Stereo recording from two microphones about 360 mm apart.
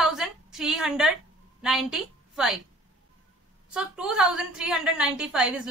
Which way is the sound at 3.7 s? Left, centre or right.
Centre.